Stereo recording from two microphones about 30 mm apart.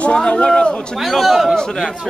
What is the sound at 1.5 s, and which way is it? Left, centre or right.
Speech, left.